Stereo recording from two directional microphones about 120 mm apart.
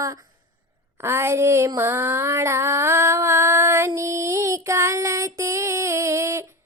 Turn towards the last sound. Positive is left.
turn(degrees=-25)  # may be behind; listen again after turning